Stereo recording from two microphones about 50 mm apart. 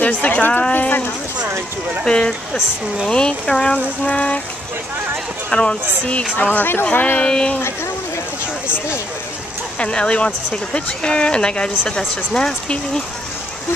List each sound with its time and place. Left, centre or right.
0.0 s speech: left
0.7 s clip-clop: left
2.0 s speech: centre
5.5 s speech: left
6.5 s speech: left
7.2 s speech: centre
9.8 s speech: left